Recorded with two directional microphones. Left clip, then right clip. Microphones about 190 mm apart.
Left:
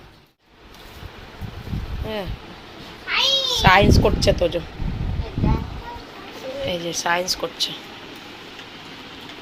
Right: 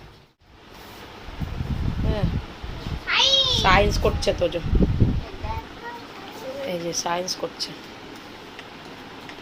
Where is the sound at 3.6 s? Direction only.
20° left (ahead or behind).